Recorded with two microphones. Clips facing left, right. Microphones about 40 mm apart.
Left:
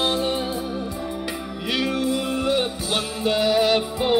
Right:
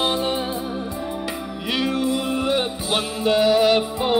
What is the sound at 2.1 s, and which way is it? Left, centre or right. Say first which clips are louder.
Music: right 1 dB; right.